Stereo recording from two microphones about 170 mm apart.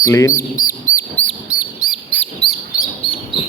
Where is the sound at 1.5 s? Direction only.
5° right (ahead or behind).